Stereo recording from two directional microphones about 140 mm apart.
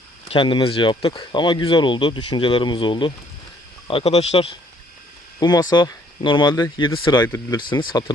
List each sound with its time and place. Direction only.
0.3 s speech: 35° left (ahead or behind)
5.4 s speech: 30° left (ahead or behind)